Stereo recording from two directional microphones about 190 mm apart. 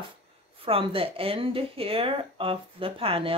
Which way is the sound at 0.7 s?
30° right (ahead or behind).